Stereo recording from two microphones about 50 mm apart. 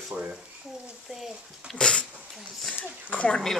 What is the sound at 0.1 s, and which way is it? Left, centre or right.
Speech, right.